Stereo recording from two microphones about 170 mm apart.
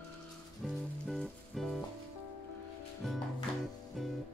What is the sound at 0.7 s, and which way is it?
Music, centre (ahead or behind).